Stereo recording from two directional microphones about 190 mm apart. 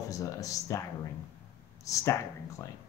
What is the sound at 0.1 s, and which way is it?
Speech, 15° left (ahead or behind).